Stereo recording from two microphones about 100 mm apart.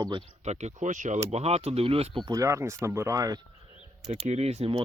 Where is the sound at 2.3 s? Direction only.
30° right (ahead or behind).